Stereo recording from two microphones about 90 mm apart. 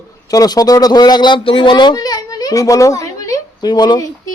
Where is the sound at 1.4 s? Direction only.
75° left (ahead or behind); by 4.0 s 50° left (ahead or behind).